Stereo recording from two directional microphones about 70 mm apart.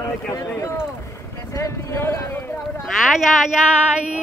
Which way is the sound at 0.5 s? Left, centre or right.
Left.